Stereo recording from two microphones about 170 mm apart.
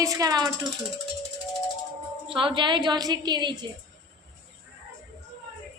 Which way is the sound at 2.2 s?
30° right (ahead or behind).